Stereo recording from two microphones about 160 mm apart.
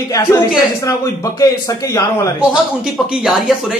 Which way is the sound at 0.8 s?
20° left (ahead or behind).